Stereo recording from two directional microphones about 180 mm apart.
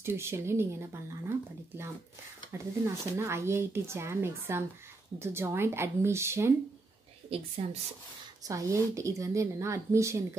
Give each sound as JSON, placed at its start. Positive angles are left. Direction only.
{"t": 0.0, "sound": "speech", "side_deg": -15}
{"t": 2.5, "sound": "speech", "side_deg": -15}
{"t": 7.2, "sound": "a woman's voice", "side_deg": -35}
{"t": 8.5, "sound": "speech", "side_deg": -15}